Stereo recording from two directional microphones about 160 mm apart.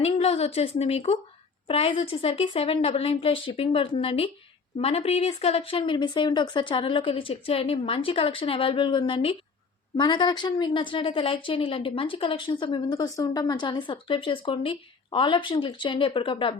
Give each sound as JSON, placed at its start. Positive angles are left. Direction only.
{"t": 0.0, "sound": "a woman's voice", "side_deg": 40}